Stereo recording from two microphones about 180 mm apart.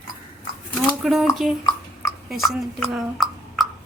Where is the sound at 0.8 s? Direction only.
Centre (ahead or behind).